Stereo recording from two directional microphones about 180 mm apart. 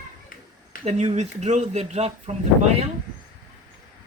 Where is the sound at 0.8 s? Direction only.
35° right (ahead or behind).